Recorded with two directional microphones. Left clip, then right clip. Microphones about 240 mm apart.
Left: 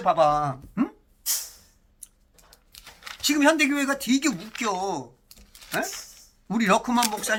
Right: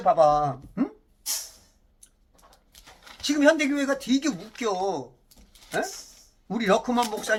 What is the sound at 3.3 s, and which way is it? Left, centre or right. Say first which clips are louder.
Speech: even; centre.